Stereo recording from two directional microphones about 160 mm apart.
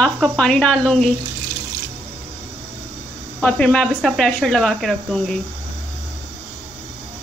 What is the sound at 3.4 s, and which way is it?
A woman's voice, 5° left (ahead or behind).